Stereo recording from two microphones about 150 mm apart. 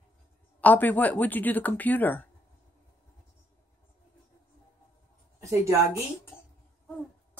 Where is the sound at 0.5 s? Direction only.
10° left (ahead or behind).